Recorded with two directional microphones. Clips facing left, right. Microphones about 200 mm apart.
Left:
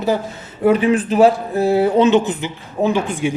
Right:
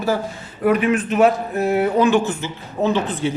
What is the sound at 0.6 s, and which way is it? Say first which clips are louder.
Speech: left 3 dB; 30° left (ahead or behind).